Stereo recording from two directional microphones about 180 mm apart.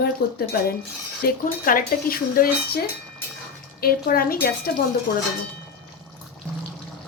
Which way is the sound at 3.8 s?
55° left (ahead or behind).